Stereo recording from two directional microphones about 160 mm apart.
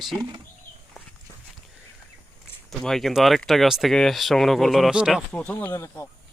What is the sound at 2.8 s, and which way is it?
Speech, centre (ahead or behind).